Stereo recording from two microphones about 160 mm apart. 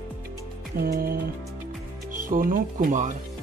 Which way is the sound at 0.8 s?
70° right (ahead or behind).